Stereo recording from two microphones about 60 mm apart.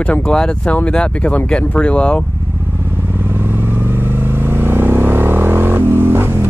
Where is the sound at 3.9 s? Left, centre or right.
Right.